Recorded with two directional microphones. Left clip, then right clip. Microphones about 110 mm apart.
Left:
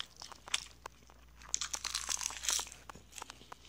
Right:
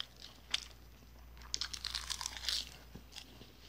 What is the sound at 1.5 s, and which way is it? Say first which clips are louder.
Crumpling: left 2 dB; 30° right (ahead or behind).